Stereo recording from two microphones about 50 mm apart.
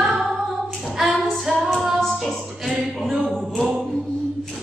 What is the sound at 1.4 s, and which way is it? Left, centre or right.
Female singing, centre.